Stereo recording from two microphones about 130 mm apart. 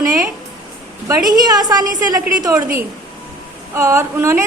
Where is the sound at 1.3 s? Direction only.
30° right (ahead or behind).